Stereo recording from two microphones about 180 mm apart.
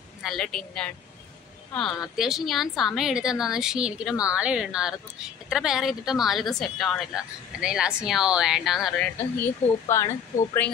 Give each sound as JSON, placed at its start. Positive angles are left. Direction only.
{"t": 0.2, "sound": "speech", "side_deg": 0}